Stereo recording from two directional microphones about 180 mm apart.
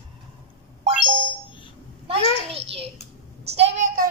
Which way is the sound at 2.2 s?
30° left (ahead or behind).